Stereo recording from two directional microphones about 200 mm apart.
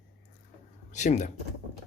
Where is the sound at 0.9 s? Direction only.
35° left (ahead or behind).